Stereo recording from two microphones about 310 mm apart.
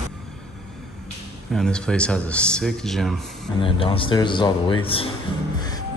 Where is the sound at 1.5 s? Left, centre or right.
Centre.